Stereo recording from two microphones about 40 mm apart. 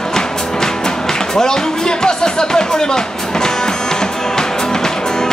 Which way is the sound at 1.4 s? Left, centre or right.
Centre.